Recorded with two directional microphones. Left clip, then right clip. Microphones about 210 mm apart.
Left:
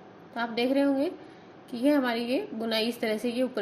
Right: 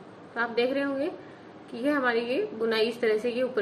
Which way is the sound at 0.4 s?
35° left (ahead or behind).